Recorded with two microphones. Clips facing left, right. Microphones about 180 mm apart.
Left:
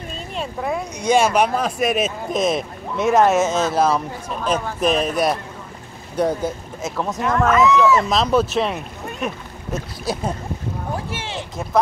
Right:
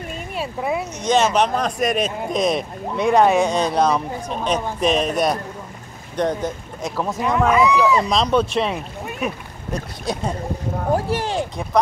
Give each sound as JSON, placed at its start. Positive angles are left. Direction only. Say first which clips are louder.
{"t": 0.4, "sound": "speech", "louder": "right 1 dB", "side_deg": -5}
{"t": 1.0, "sound": "speech", "louder": "left 1 dB", "side_deg": 10}
{"t": 7.4, "sound": "speech", "louder": "left 1 dB", "side_deg": -10}
{"t": 8.0, "sound": "speech", "louder": "even", "side_deg": 5}
{"t": 10.9, "sound": "speech", "louder": "right 10 dB", "side_deg": -40}